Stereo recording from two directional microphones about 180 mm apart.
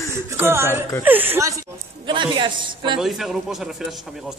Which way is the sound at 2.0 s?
25° right (ahead or behind).